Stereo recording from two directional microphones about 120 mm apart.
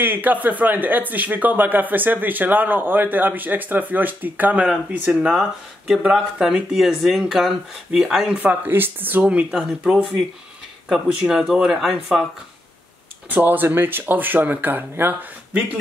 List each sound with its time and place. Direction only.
0.0 s speech: 15° right (ahead or behind)
13.3 s speech: 15° right (ahead or behind)